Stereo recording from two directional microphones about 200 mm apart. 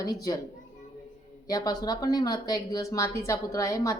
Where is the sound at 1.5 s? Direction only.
20° left (ahead or behind).